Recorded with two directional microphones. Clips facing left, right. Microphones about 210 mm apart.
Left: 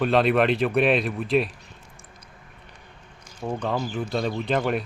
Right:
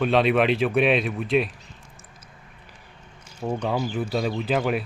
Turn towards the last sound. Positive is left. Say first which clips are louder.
# even
turn(degrees=-5)  # may be behind; listen again after turning